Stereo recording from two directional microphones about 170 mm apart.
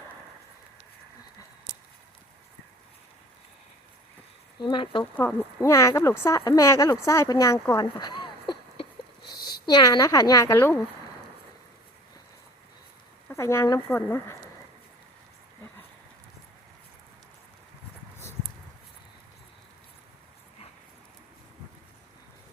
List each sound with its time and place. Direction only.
4.6 s speech: 30° left (ahead or behind)
5.1 s speech: 15° left (ahead or behind)
7.8 s a sound: 25° left (ahead or behind)
9.5 s speech: 25° left (ahead or behind)
13.2 s speech: 15° left (ahead or behind)